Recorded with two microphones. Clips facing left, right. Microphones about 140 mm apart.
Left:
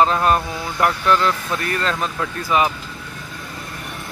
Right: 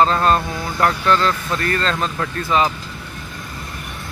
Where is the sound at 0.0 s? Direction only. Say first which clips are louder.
Right 1 dB; 15° left (ahead or behind).